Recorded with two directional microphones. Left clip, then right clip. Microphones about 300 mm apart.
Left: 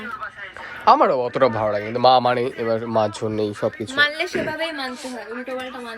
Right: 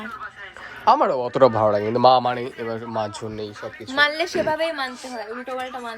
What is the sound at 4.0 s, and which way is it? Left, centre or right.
Speech, right.